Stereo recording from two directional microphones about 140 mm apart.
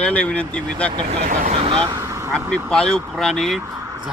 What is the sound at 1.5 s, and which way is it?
Speech, 40° right (ahead or behind).